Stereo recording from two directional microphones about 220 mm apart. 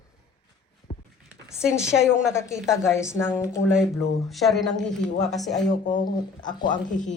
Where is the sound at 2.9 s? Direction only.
10° left (ahead or behind).